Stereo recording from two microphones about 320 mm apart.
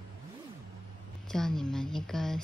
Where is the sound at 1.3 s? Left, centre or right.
Centre.